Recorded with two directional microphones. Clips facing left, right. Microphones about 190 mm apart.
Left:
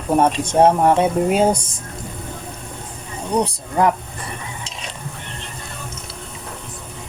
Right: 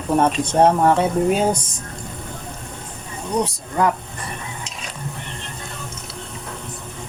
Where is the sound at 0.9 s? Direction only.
20° left (ahead or behind).